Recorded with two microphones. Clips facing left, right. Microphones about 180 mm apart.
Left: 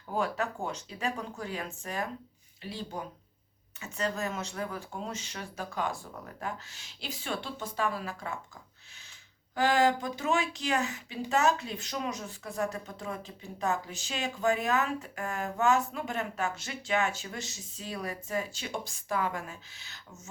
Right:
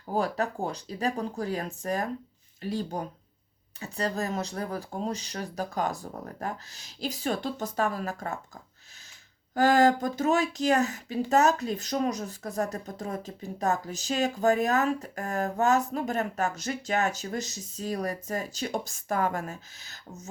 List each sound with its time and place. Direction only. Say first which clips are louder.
0.1 s speech: right 3 dB; 35° right (ahead or behind)
9.6 s speech: right 4 dB; 40° right (ahead or behind)